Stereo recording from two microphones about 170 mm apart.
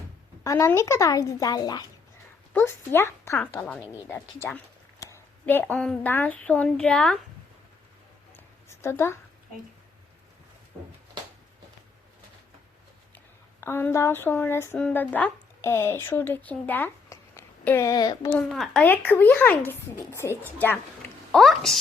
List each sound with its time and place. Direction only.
0.4 s a woman's voice: 20° left (ahead or behind)
2.5 s speech: 10° left (ahead or behind)
8.7 s a woman's voice: 15° left (ahead or behind)
13.1 s a sound: 15° left (ahead or behind)
18.3 s speech: 5° left (ahead or behind)
21.3 s speech: centre (ahead or behind)